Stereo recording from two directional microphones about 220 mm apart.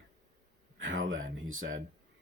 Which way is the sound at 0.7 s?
60° right (ahead or behind).